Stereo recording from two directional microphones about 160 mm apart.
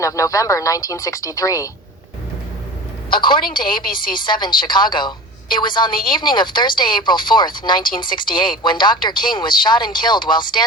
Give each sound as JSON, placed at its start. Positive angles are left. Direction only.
{"t": 0.0, "sound": "speech", "side_deg": 20}
{"t": 3.2, "sound": "a woman's voice", "side_deg": 30}